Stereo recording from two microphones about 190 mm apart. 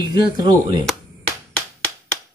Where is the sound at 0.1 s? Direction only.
25° right (ahead or behind).